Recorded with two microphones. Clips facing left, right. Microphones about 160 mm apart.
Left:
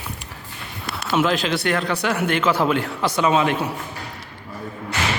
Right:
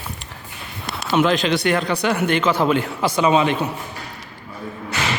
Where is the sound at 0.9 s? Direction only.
5° left (ahead or behind).